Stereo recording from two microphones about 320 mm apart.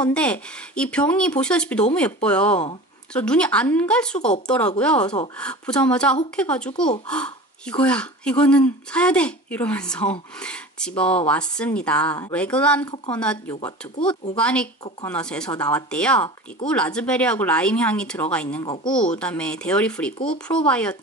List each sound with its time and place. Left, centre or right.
0.0 s speech: centre
14.3 s speech: centre